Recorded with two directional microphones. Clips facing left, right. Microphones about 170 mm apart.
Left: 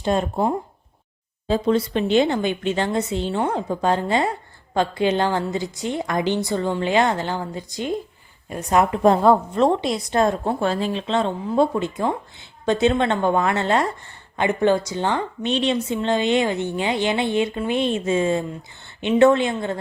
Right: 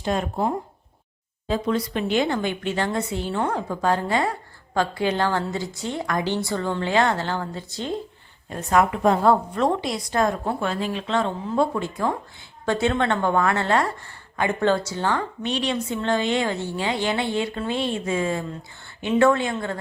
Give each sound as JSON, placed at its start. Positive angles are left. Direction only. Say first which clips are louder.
{"t": 0.0, "sound": "speech", "louder": "left 3 dB", "side_deg": 30}